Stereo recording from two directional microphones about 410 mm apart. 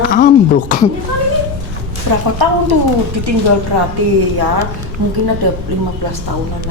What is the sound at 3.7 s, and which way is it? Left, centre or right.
Speech, right.